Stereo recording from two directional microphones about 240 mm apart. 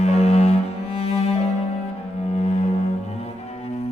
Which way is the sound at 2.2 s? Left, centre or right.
Left.